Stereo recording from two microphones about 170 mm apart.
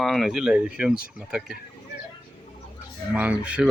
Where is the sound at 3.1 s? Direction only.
10° right (ahead or behind).